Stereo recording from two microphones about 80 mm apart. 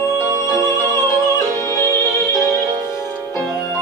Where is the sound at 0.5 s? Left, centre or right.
Left.